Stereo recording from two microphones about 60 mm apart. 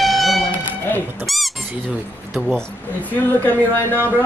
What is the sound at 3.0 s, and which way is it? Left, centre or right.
Speech, left.